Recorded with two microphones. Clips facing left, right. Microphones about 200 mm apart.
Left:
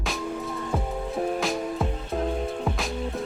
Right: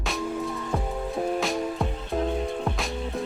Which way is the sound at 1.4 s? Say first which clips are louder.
Even; centre (ahead or behind).